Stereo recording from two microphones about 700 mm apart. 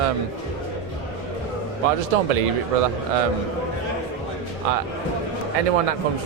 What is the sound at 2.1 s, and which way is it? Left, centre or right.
Speech, right.